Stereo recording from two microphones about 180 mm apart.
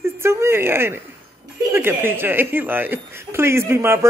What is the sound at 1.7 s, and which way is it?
Speech, 10° right (ahead or behind).